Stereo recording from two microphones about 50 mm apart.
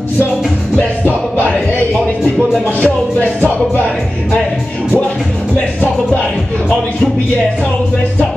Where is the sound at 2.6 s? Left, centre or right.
Left.